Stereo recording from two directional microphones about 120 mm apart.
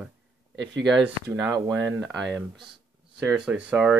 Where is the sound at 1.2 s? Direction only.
25° right (ahead or behind).